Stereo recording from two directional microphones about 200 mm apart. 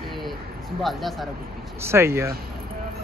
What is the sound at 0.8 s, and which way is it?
Speech, centre (ahead or behind).